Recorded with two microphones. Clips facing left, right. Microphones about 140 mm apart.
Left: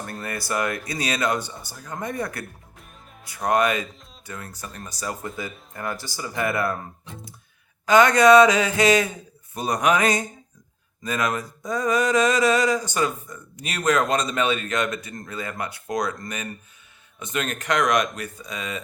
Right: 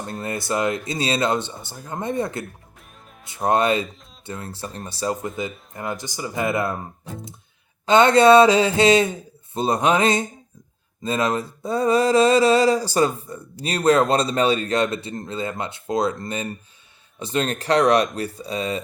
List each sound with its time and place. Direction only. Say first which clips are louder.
0.0 s speech: right 4 dB; 25° right (ahead or behind)
2.7 s music: even; centre (ahead or behind)
3.2 s speech: right 2 dB; 25° right (ahead or behind)
7.9 s speech: right 2 dB; 30° right (ahead or behind)
11.0 s mantra: right 3 dB; 30° right (ahead or behind)